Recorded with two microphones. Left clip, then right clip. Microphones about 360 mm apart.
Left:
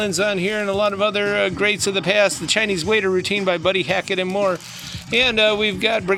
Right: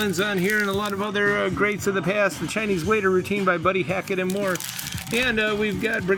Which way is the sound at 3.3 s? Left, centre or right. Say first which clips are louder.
Left 2 dB; left.